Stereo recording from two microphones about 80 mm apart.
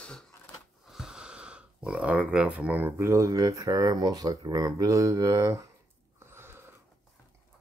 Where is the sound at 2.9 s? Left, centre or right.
Right.